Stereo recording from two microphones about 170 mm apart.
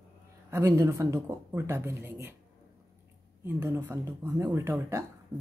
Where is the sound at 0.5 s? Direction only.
15° right (ahead or behind).